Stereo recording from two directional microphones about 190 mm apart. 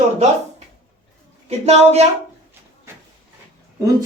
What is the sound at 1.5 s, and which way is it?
Speech, 35° right (ahead or behind).